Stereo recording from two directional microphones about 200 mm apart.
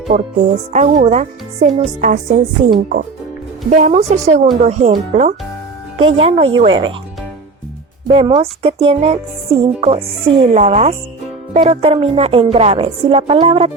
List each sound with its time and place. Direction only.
0.1 s a woman's voice: 40° right (ahead or behind); by 6.9 s 25° right (ahead or behind)
8.1 s a woman's voice: 25° right (ahead or behind)